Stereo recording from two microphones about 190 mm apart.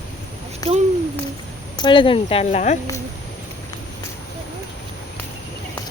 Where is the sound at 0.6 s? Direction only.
20° left (ahead or behind); by 2.8 s 35° left (ahead or behind).